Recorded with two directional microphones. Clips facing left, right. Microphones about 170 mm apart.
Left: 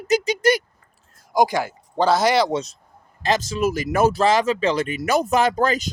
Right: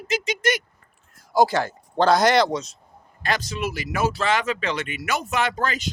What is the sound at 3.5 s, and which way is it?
Speech, 45° left (ahead or behind).